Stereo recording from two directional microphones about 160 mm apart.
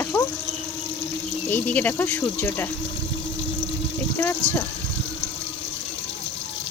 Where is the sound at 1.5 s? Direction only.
10° left (ahead or behind).